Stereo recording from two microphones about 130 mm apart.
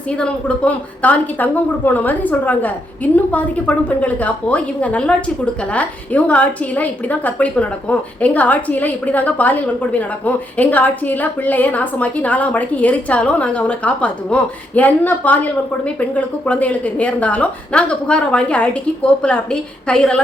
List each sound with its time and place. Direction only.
0.2 s a woman's voice: 10° left (ahead or behind)